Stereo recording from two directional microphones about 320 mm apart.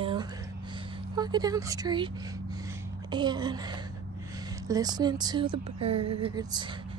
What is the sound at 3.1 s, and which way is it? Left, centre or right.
Speech, centre.